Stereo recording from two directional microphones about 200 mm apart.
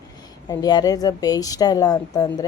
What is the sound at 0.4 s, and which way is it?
Speech, 20° left (ahead or behind).